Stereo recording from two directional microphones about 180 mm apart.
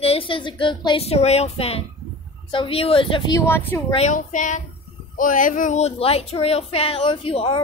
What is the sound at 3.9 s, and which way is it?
A woman's voice, 40° left (ahead or behind).